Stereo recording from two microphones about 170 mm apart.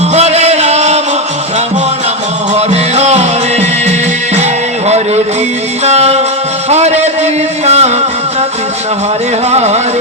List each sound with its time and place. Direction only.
0.1 s music: 40° right (ahead or behind)
2.6 s music: 40° right (ahead or behind)
4.9 s a sound: 40° right (ahead or behind)
5.8 s music: 40° right (ahead or behind)
6.7 s a sound: 40° right (ahead or behind)
9.5 s music: 40° right (ahead or behind)